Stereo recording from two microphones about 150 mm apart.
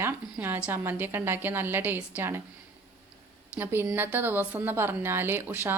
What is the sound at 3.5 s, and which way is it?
A woman's voice, 15° right (ahead or behind).